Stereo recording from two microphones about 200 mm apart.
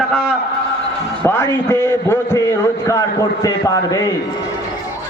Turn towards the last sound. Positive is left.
turn(degrees=20)  # may be behind; listen again after turning